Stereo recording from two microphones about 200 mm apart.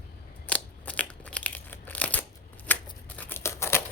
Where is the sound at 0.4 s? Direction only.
5° left (ahead or behind).